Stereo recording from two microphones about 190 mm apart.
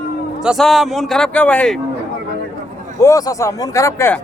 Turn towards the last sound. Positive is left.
turn(degrees=15)  # may be behind; listen again after turning